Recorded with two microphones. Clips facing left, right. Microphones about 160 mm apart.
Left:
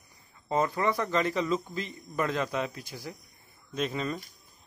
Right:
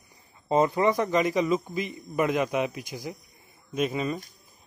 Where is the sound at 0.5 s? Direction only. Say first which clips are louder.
Right 5 dB; 20° right (ahead or behind).